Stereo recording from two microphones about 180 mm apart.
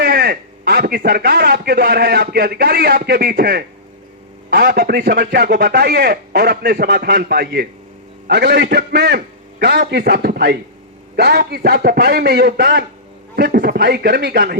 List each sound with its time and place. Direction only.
0.0 s a man's voice: 60° right (ahead or behind)
8.3 s a man's voice: 70° right (ahead or behind)